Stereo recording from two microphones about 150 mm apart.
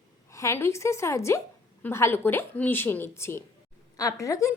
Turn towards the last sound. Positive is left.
turn(degrees=20)  # may be behind; listen again after turning